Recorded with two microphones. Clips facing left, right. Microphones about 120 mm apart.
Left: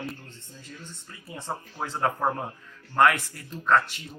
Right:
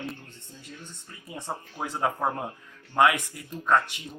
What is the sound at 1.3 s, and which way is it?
Speech, 15° right (ahead or behind).